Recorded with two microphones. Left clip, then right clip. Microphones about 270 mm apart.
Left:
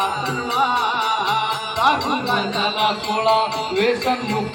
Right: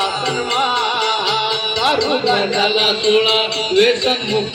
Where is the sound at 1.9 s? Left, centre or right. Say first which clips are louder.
Right 4 dB; right.